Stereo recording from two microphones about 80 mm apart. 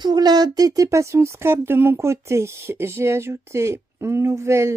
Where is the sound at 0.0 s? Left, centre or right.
Right.